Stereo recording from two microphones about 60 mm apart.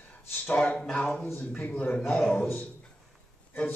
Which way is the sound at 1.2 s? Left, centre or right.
Left.